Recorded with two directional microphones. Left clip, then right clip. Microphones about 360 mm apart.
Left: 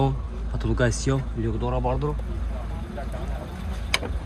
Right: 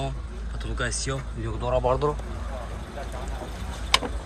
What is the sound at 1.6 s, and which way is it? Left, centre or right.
Speech, centre.